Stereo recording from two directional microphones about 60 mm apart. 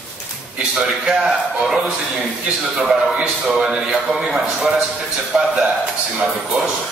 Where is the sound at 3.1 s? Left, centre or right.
Centre.